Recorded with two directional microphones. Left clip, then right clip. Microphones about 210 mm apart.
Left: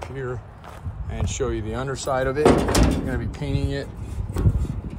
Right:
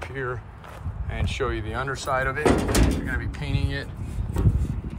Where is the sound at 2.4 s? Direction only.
Centre (ahead or behind).